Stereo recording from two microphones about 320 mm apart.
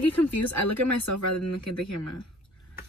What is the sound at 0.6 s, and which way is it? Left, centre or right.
Speech, left.